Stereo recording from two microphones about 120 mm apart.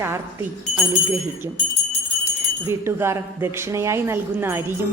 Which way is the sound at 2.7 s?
20° right (ahead or behind).